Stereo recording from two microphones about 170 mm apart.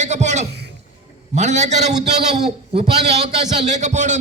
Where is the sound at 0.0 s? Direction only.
45° right (ahead or behind).